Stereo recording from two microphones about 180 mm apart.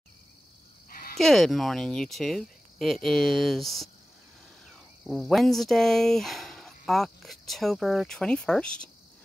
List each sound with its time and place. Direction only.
0.8 s sheep: 50° left (ahead or behind)
1.1 s speech: centre (ahead or behind)
5.0 s speech: centre (ahead or behind)